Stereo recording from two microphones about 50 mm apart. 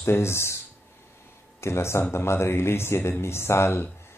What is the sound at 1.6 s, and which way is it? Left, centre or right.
Speech, left.